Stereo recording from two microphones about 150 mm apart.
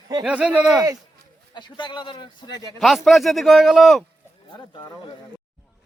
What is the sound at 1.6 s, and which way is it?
Speech, 30° left (ahead or behind).